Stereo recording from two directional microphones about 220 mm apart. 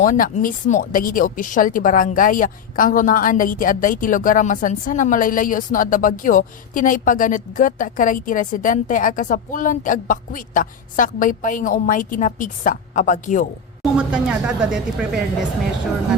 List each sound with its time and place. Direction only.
0.0 s speech: 35° left (ahead or behind)
13.9 s speech: 5° right (ahead or behind)